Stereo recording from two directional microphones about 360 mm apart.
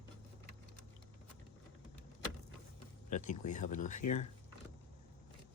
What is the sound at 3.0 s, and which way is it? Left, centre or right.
Speech, left.